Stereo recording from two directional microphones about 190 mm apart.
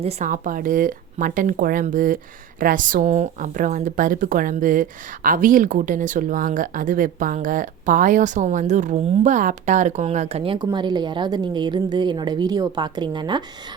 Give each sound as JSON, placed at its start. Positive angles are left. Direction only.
{"t": 0.0, "sound": "a woman's voice", "side_deg": -35}